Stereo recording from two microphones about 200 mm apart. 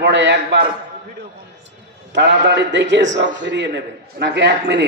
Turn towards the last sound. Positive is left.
turn(degrees=-60)  # may be behind; listen again after turning